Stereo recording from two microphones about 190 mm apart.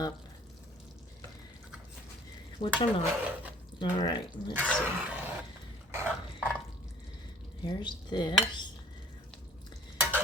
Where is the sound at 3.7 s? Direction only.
25° left (ahead or behind).